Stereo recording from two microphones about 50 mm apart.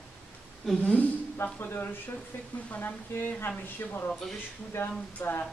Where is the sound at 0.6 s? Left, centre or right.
Centre.